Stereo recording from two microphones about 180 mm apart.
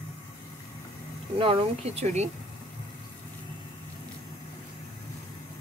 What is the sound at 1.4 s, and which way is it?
Speech, 30° right (ahead or behind).